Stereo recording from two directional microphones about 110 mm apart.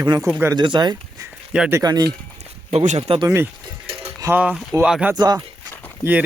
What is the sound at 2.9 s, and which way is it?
Speech, 70° right (ahead or behind).